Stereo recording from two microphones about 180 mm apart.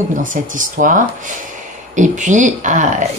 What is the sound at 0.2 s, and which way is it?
A woman's voice, 45° right (ahead or behind).